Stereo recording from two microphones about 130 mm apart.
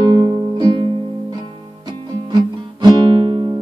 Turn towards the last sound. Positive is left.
turn(degrees=-35)  # may be behind; listen again after turning